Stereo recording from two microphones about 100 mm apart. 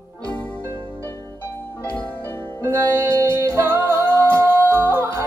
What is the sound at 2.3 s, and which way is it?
Music, 25° left (ahead or behind).